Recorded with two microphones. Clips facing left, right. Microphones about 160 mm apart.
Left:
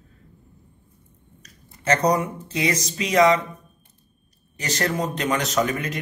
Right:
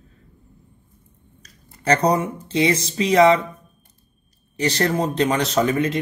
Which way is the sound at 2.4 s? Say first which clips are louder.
Right 5 dB; 30° right (ahead or behind).